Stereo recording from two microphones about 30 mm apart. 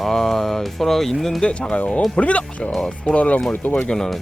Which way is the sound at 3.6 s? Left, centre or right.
Left.